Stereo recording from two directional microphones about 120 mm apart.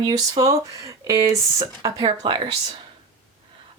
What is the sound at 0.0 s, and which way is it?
Speech, 30° right (ahead or behind).